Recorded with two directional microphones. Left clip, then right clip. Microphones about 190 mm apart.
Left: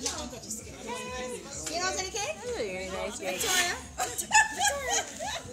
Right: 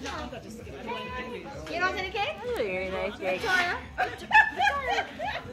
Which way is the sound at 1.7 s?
10° left (ahead or behind).